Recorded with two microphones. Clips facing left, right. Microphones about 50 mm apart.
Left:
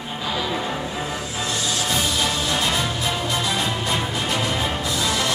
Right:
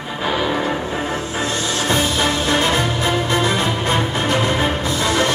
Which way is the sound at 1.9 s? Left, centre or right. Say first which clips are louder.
Right 6 dB; right.